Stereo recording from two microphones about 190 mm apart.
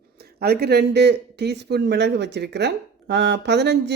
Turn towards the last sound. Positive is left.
turn(degrees=-65)  # may be behind; listen again after turning